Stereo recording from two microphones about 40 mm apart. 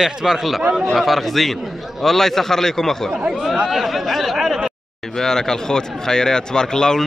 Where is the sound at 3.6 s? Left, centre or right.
Centre.